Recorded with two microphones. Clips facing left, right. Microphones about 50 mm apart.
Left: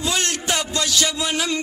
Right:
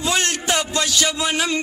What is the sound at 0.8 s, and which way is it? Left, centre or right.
Music, centre.